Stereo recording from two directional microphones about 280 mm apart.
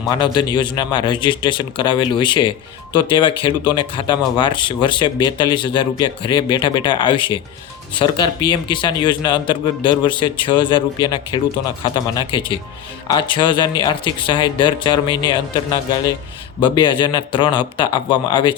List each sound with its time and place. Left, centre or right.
0.1 s speech: centre